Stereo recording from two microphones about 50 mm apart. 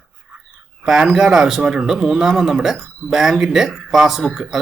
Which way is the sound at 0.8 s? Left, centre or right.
Centre.